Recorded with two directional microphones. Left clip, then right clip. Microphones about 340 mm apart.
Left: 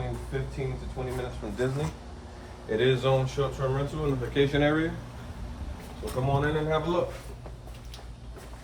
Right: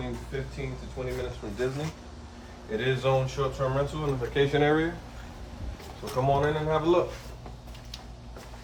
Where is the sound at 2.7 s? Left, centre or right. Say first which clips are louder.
Left 2 dB; centre.